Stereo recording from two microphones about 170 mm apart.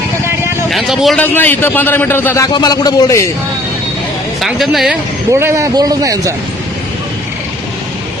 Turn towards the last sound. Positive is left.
turn(degrees=-20)  # may be behind; listen again after turning